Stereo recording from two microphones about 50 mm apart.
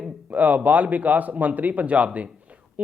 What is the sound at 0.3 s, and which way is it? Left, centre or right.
A man's voice, right.